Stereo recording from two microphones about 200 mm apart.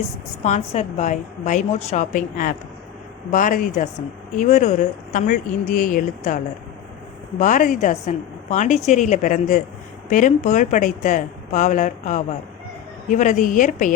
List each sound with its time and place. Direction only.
0.4 s speech: 35° left (ahead or behind)